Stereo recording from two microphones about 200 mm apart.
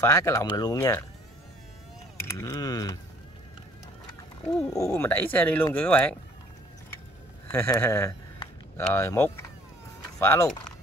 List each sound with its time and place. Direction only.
0.0 s speech: 15° left (ahead or behind)
2.2 s speech: 15° left (ahead or behind)
4.6 s speech: 15° left (ahead or behind)
7.5 s speech: 10° left (ahead or behind)
8.4 s a sound: 15° left (ahead or behind)
10.2 s speech: 15° left (ahead or behind)